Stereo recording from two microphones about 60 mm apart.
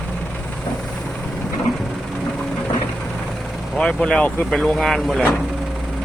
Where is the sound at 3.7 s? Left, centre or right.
Centre.